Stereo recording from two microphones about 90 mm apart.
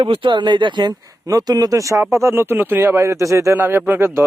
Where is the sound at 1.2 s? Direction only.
45° right (ahead or behind).